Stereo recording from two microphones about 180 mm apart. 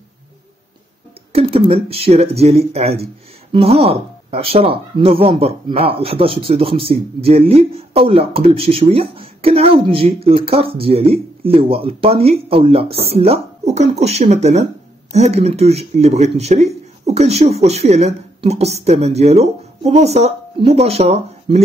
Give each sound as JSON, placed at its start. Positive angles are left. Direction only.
{"t": 1.3, "sound": "speech", "side_deg": -35}